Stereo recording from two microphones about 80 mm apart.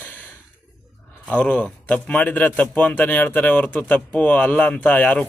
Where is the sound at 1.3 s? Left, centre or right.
Centre.